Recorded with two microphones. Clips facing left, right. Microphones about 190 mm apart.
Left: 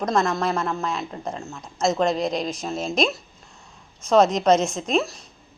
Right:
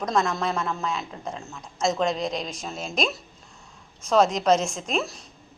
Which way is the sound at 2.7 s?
40° left (ahead or behind).